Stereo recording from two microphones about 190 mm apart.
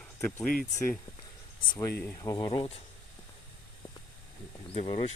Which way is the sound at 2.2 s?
20° left (ahead or behind).